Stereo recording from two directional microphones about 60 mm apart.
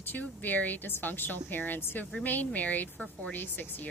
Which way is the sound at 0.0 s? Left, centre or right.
Left.